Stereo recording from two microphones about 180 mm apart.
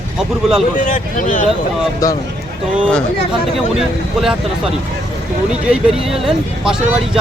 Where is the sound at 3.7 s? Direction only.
Centre (ahead or behind).